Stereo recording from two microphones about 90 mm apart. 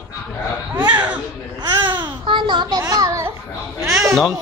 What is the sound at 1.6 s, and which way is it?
Babbling, 55° right (ahead or behind).